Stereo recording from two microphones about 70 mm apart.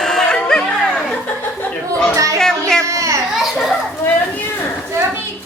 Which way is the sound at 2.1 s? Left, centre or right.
Right.